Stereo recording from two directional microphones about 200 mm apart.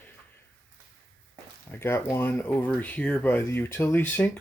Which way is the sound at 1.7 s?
10° left (ahead or behind).